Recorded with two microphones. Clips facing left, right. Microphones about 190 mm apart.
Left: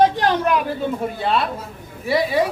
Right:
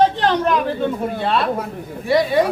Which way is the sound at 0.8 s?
Centre (ahead or behind).